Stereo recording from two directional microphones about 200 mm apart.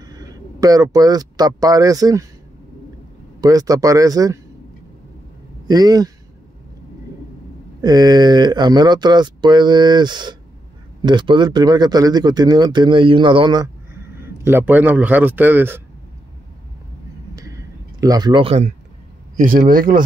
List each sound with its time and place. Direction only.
0.0 s speech: 20° right (ahead or behind)
3.3 s speech: 15° right (ahead or behind)
5.7 s speech: 20° right (ahead or behind)
7.8 s speech: 20° right (ahead or behind)
14.1 s speech: 10° right (ahead or behind)
18.0 s speech: 20° right (ahead or behind)
19.3 s speech: 45° right (ahead or behind)